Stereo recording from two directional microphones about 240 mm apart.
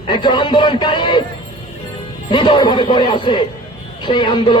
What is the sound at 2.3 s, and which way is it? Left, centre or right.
Speech, centre.